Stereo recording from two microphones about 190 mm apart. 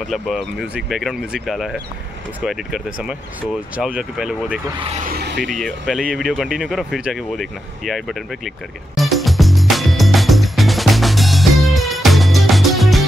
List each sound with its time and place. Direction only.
0.1 s speech: centre (ahead or behind)
5.0 s speech: 55° right (ahead or behind)
5.4 s speech: centre (ahead or behind)
8.9 s music: centre (ahead or behind)